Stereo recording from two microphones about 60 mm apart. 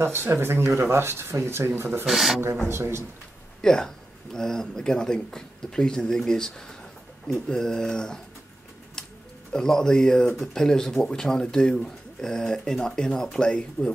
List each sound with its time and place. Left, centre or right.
0.0 s speech: right
2.0 s speech: centre
2.7 s speech: right
3.6 s speech: centre
9.5 s speech: centre